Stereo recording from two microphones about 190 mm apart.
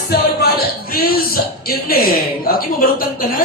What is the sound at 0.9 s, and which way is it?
Speech, 50° left (ahead or behind).